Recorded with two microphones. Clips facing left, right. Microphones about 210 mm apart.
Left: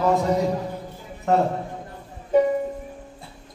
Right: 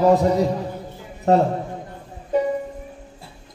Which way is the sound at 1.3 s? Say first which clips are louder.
Right 4 dB; 35° right (ahead or behind).